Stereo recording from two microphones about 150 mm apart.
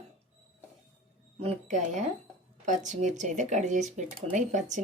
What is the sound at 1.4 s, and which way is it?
Speech, 50° right (ahead or behind).